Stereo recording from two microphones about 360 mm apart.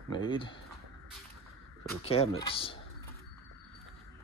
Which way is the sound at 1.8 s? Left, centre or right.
Centre.